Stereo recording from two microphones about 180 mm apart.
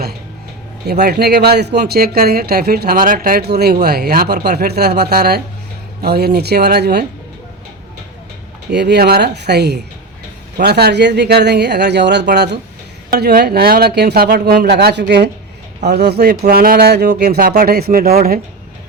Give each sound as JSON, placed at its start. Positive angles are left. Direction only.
{"t": 0.9, "sound": "speech", "side_deg": -65}
{"t": 8.7, "sound": "speech", "side_deg": -70}